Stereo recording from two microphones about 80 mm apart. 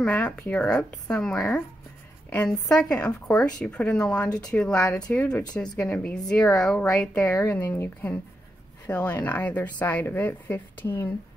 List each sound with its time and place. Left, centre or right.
0.0 s a woman's voice: centre
0.6 s speech: centre
7.5 s a woman's voice: left